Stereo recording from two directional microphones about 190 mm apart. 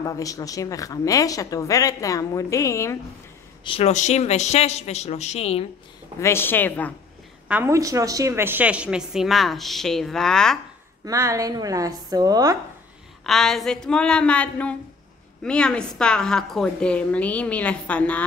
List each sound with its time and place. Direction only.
0.0 s speech: 15° left (ahead or behind)
3.6 s speech: 30° left (ahead or behind)
6.1 s speech: 15° left (ahead or behind)
7.4 s a woman's voice: 10° right (ahead or behind)
11.1 s a woman's voice: 15° right (ahead or behind)
13.2 s a woman's voice: centre (ahead or behind)